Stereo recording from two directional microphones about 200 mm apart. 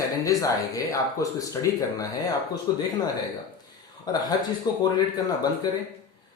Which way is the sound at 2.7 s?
20° left (ahead or behind).